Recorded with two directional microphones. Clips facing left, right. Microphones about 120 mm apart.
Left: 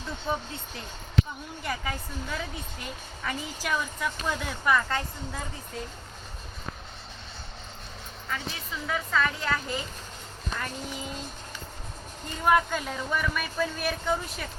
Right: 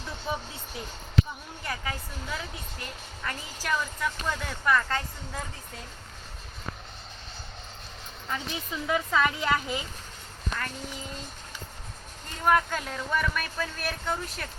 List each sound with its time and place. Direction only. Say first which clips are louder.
1.6 s a woman's voice: left 2 dB; centre (ahead or behind)
8.3 s a woman's voice: right 2 dB; 20° right (ahead or behind)
12.5 s a woman's voice: left 1 dB; 5° left (ahead or behind)